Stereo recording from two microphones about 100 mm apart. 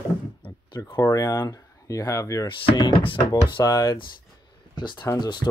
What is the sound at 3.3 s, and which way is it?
Speech, 40° left (ahead or behind).